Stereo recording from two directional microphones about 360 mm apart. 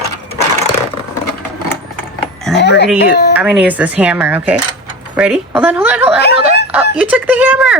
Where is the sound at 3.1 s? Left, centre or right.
Left.